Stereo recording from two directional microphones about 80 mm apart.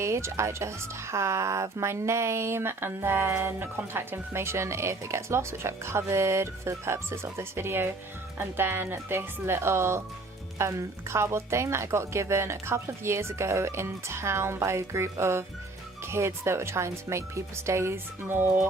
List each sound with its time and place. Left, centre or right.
0.0 s speech: right